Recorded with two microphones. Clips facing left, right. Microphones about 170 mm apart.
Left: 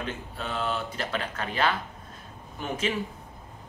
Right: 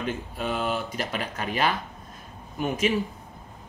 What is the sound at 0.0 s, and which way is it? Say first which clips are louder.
Speech: right 5 dB; 15° right (ahead or behind).